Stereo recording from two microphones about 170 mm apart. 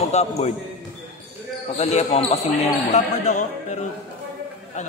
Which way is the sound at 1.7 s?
40° left (ahead or behind).